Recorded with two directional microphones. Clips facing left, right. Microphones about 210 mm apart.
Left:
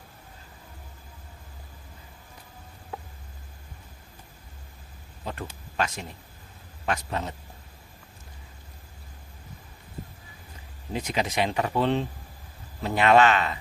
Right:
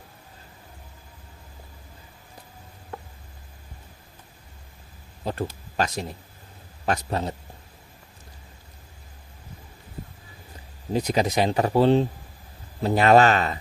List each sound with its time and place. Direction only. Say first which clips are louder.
5.2 s speech: right 7 dB; 35° right (ahead or behind)
10.9 s speech: right 5 dB; 40° right (ahead or behind)